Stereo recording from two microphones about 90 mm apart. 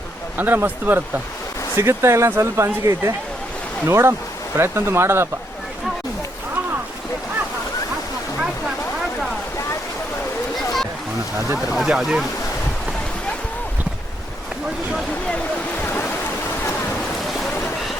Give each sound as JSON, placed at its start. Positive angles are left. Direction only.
{"t": 0.3, "sound": "speech", "side_deg": -20}
{"t": 11.7, "sound": "speech", "side_deg": -5}
{"t": 15.8, "sound": "a sound", "side_deg": 20}